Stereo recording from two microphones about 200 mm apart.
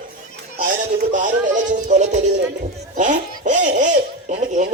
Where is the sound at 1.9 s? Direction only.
35° right (ahead or behind).